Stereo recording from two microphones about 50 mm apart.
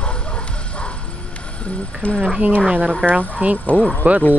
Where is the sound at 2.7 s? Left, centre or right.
Right.